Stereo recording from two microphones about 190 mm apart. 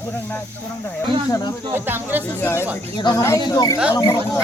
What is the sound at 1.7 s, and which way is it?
Speech, 10° right (ahead or behind).